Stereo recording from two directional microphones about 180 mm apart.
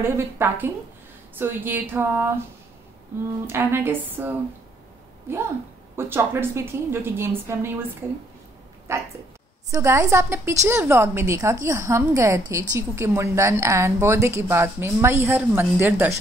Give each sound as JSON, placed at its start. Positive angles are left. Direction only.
{"t": 0.0, "sound": "a woman's voice", "side_deg": -15}
{"t": 3.4, "sound": "a woman's voice", "side_deg": -10}
{"t": 5.9, "sound": "a woman's voice", "side_deg": -10}